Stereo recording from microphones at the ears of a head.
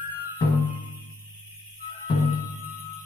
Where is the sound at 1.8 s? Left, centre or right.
Left.